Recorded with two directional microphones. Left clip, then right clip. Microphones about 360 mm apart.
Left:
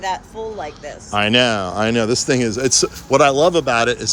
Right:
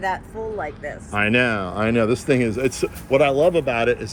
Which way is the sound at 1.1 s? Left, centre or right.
Centre.